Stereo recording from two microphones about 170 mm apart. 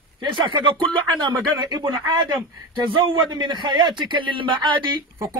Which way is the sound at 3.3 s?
25° right (ahead or behind).